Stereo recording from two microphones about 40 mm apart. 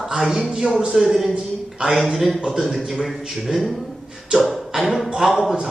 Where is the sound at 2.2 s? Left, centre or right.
Centre.